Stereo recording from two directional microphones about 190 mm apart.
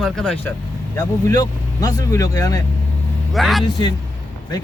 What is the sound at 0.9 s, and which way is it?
Speech, 15° left (ahead or behind).